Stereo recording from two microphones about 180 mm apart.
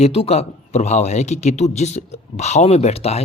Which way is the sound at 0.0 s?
35° left (ahead or behind).